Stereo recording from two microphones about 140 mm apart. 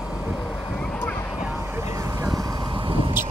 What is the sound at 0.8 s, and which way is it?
Vehicle, 10° left (ahead or behind).